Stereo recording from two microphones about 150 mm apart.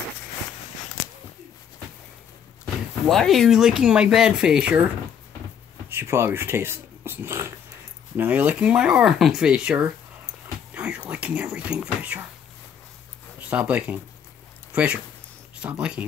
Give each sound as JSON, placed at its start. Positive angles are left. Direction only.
{"t": 3.1, "sound": "speech", "side_deg": 0}
{"t": 5.9, "sound": "speech", "side_deg": -15}
{"t": 13.4, "sound": "speech", "side_deg": -10}